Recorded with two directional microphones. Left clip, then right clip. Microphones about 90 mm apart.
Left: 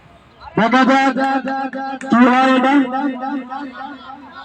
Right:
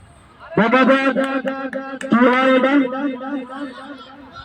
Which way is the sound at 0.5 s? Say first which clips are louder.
Left 1 dB; 20° left (ahead or behind).